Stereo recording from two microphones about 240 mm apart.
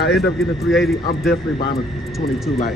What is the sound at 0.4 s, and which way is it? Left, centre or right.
Speech, centre.